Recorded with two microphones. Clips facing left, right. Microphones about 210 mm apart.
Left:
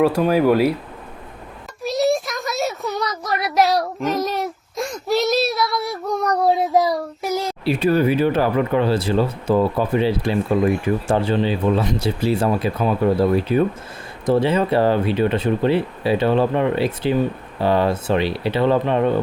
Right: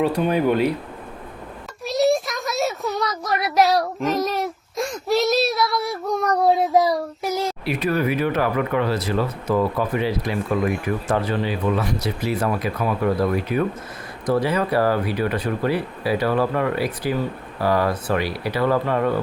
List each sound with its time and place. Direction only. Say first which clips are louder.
0.2 s child singing: left 3 dB; 5° left (ahead or behind)
1.8 s a sound: even; centre (ahead or behind)
6.4 s child singing: even; centre (ahead or behind)
7.6 s speech: left 7 dB; 30° left (ahead or behind)